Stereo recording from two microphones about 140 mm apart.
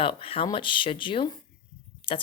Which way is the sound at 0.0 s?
40° left (ahead or behind).